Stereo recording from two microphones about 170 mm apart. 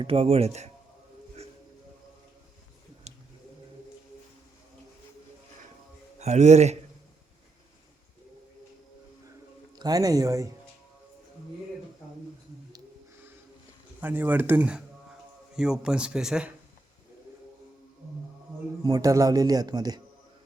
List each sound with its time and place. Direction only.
0.0 s speech: 35° right (ahead or behind)
3.1 s a sound: 40° right (ahead or behind)
6.1 s a man's voice: 40° right (ahead or behind)
9.7 s speech: 20° right (ahead or behind)
14.0 s speech: 10° right (ahead or behind)
18.8 s speech: 20° right (ahead or behind)